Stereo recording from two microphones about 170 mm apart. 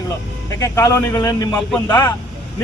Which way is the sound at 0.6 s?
20° left (ahead or behind).